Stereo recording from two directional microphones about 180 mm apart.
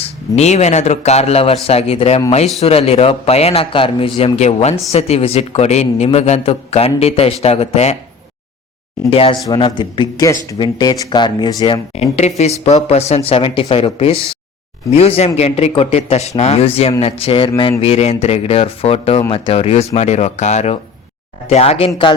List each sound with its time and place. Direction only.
0.0 s a man's voice: 40° left (ahead or behind)
9.0 s speech: 30° left (ahead or behind)
12.2 s a man's voice: 40° left (ahead or behind)